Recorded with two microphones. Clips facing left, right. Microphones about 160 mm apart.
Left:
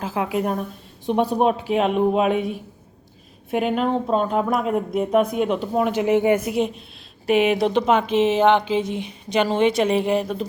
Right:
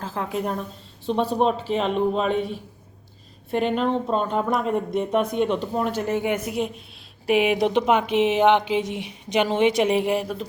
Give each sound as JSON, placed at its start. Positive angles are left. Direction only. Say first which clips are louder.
{"t": 0.0, "sound": "speech", "louder": "left 4 dB", "side_deg": 10}
{"t": 6.4, "sound": "speech", "louder": "left 4 dB", "side_deg": 0}
{"t": 7.3, "sound": "a woman's voice", "louder": "left 2 dB", "side_deg": -10}